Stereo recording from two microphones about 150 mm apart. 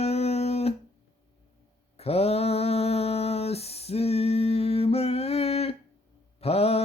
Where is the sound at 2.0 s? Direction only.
45° left (ahead or behind).